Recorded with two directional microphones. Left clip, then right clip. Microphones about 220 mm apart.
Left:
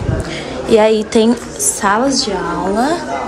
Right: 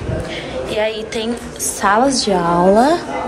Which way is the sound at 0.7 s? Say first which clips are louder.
Left 10 dB; 25° left (ahead or behind).